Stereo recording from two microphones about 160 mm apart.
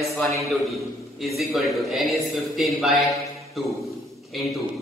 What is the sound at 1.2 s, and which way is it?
A man's voice, centre (ahead or behind).